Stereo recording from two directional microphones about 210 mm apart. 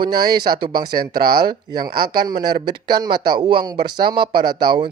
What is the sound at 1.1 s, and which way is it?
Speech, 50° right (ahead or behind).